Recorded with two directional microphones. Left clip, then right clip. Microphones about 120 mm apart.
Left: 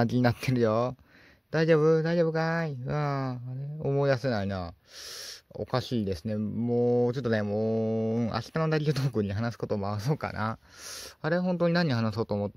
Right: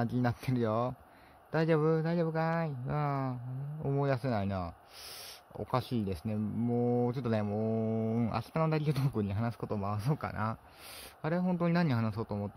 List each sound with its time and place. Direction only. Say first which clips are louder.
0.0 s speech: left 7 dB; 60° left (ahead or behind)